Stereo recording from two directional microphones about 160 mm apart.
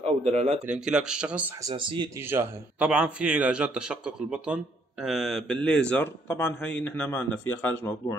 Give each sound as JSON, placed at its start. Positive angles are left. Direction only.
{"t": 0.0, "sound": "speech", "side_deg": -40}
{"t": 0.7, "sound": "a man's voice", "side_deg": -5}
{"t": 1.6, "sound": "speech", "side_deg": -30}
{"t": 2.2, "sound": "a man's voice", "side_deg": -10}